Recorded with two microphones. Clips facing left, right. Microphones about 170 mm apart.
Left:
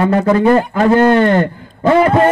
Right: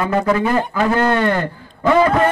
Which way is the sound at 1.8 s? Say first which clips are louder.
Left 3 dB; 30° left (ahead or behind).